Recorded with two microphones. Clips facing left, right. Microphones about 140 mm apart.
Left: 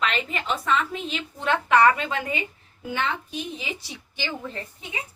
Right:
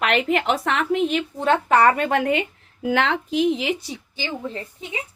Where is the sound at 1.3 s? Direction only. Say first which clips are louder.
Right 1 dB; 35° right (ahead or behind); by 3.7 s 85° right.